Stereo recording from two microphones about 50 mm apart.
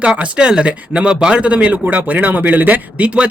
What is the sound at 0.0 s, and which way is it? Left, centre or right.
Speech, right.